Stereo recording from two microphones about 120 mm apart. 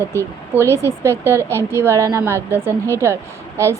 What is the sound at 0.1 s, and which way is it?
Speech, 20° right (ahead or behind).